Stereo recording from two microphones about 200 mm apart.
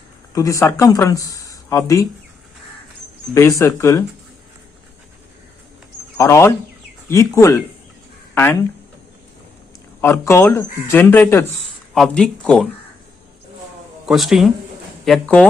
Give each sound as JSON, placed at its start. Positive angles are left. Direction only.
{"t": 0.3, "sound": "speech", "side_deg": 15}
{"t": 3.3, "sound": "speech", "side_deg": 15}
{"t": 6.1, "sound": "speech", "side_deg": 15}
{"t": 10.0, "sound": "speech", "side_deg": 15}
{"t": 14.1, "sound": "speech", "side_deg": 0}